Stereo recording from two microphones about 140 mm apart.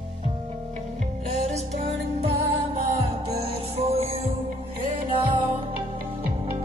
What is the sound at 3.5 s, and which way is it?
Music, 45° right (ahead or behind).